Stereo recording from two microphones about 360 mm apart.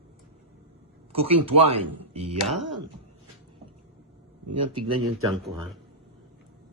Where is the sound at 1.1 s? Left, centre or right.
Centre.